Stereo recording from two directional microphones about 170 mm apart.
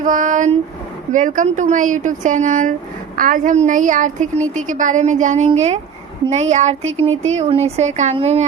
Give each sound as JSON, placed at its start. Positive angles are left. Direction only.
{"t": 0.0, "sound": "a woman's voice", "side_deg": -50}